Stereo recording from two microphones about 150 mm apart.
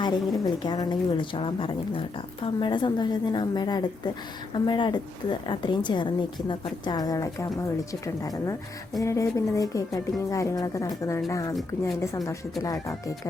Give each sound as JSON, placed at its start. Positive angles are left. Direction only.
{"t": 0.0, "sound": "a woman's voice", "side_deg": 30}